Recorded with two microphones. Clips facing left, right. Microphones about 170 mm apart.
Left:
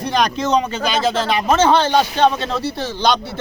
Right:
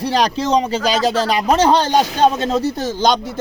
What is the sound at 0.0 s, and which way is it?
A man's voice, 30° right (ahead or behind).